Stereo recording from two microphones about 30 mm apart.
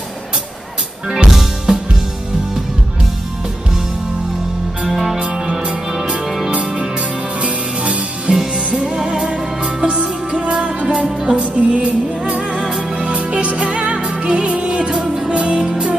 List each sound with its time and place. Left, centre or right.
1.1 s music: centre
4.8 s music: centre
7.4 s music: right
8.3 s music: right
9.8 s music: right
12.5 s music: right
13.0 s music: right